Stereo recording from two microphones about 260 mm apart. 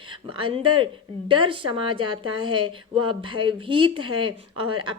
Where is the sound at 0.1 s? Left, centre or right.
Centre.